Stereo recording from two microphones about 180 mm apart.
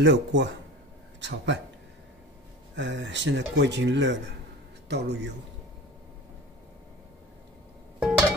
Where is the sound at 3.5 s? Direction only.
75° right (ahead or behind).